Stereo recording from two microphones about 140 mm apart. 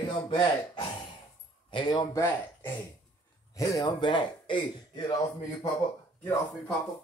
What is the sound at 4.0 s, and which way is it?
Speech, 35° left (ahead or behind).